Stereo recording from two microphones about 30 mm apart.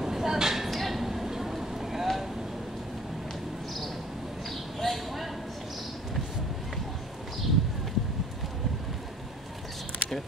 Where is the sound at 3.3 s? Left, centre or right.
Centre.